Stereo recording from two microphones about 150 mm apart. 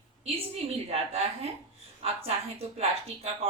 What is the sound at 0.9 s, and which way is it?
Speech, 45° right (ahead or behind).